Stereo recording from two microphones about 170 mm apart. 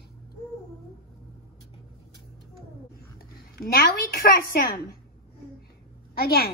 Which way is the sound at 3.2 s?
60° left (ahead or behind).